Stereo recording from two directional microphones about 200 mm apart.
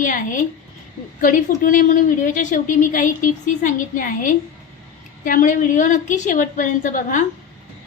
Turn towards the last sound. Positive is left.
turn(degrees=40)  # may be behind; listen again after turning